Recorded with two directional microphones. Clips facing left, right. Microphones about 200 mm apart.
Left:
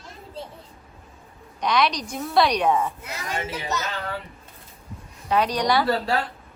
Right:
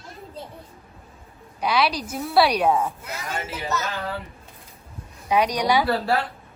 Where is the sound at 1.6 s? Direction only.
5° right (ahead or behind).